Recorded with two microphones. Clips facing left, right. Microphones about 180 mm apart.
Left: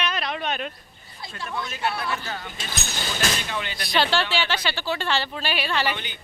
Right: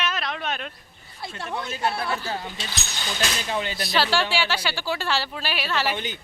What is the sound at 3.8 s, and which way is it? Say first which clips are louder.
Speech: left 2 dB; centre (ahead or behind).